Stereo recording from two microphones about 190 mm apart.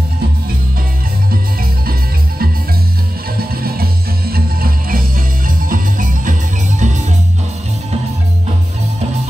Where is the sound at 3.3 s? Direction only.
50° right (ahead or behind).